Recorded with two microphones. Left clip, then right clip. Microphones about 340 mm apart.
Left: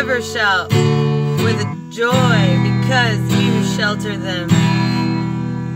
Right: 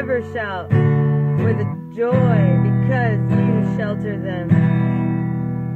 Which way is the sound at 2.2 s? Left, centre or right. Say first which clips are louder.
Left 4 dB; left.